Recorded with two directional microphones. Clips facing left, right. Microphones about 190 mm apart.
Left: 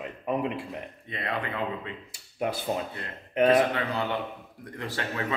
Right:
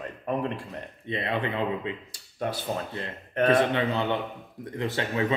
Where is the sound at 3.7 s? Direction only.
25° right (ahead or behind).